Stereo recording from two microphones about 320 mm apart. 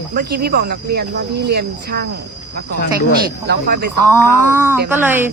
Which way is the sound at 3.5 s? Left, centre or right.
Right.